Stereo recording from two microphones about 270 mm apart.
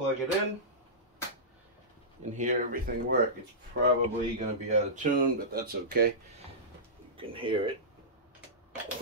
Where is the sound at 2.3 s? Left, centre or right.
Right.